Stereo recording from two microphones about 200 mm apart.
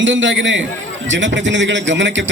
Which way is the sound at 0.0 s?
70° right (ahead or behind).